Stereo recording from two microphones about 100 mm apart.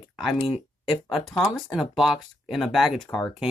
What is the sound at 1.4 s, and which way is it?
Speech, centre (ahead or behind).